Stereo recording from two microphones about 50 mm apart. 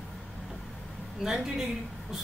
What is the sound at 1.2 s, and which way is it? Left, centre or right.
Speech, centre.